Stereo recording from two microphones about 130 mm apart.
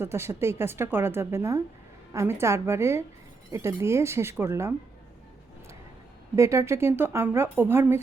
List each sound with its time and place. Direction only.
0.0 s a woman's voice: 20° right (ahead or behind)
6.3 s a woman's voice: 20° right (ahead or behind)